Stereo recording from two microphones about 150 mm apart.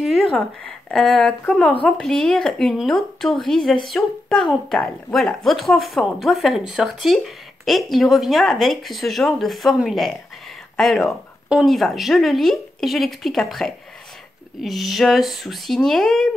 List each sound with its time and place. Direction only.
0.0 s a woman's voice: centre (ahead or behind)